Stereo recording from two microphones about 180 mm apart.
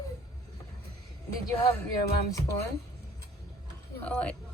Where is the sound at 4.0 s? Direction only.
10° left (ahead or behind).